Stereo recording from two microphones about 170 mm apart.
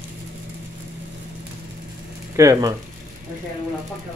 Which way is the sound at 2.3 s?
20° right (ahead or behind).